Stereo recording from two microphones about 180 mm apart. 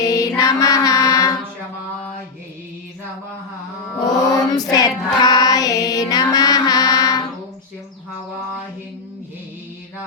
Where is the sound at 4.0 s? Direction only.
20° left (ahead or behind).